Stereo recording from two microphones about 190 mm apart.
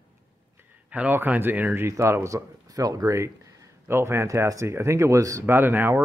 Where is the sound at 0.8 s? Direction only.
10° right (ahead or behind).